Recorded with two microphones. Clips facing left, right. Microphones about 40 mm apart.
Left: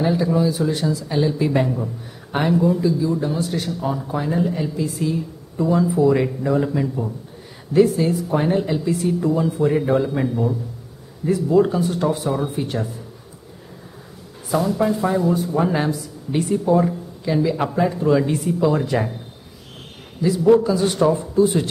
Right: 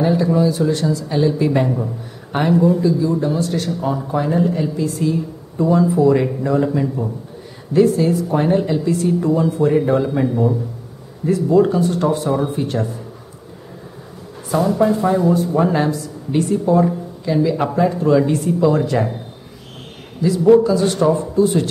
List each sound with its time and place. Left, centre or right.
0.0 s speech: centre
3.9 s speech: centre
10.2 s a man's voice: centre
11.2 s speech: centre
14.8 s speech: centre
20.4 s speech: centre